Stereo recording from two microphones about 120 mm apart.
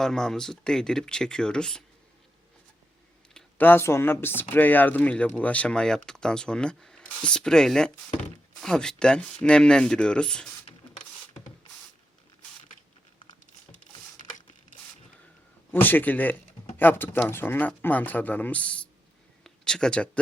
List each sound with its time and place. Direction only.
0.0 s speech: 5° left (ahead or behind)
3.6 s speech: 20° left (ahead or behind)
14.2 s a sound: 90° left
15.7 s speech: 15° left (ahead or behind)